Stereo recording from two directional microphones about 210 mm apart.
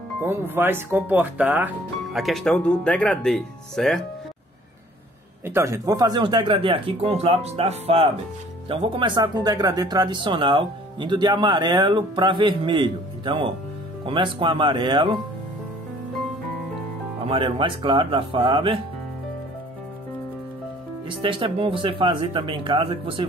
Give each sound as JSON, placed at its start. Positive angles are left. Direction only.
{"t": 0.2, "sound": "speech", "side_deg": -10}
{"t": 5.4, "sound": "speech", "side_deg": -10}
{"t": 17.3, "sound": "speech", "side_deg": -25}
{"t": 21.2, "sound": "speech", "side_deg": -25}